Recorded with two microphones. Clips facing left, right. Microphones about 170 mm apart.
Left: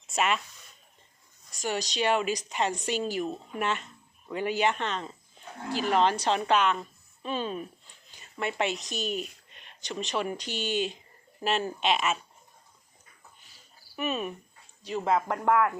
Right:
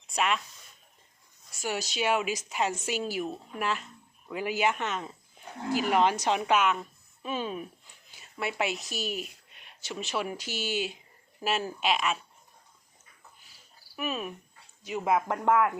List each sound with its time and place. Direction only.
0.1 s speech: centre (ahead or behind)
1.6 s a woman's voice: 5° right (ahead or behind)
13.9 s cricket: centre (ahead or behind)
14.8 s speech: 10° right (ahead or behind)